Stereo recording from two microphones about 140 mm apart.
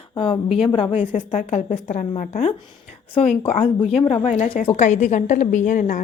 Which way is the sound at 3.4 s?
40° left (ahead or behind).